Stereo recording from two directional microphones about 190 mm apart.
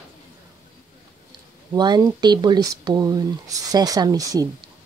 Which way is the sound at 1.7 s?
20° right (ahead or behind).